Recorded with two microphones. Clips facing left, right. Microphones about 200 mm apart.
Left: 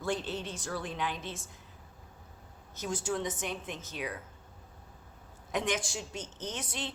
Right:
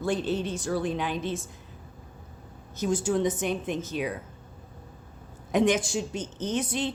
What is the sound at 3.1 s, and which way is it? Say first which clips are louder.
Speech: right 7 dB; 20° right (ahead or behind).